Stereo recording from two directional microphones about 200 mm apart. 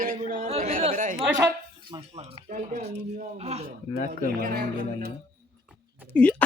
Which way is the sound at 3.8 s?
40° left (ahead or behind).